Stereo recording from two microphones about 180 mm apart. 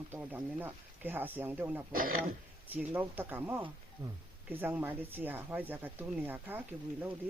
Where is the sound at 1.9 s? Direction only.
50° right (ahead or behind).